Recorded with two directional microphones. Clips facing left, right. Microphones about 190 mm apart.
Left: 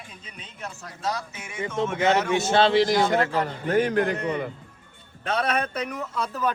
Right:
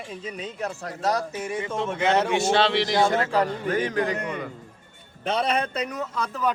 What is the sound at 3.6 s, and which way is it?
Speech, 50° left (ahead or behind).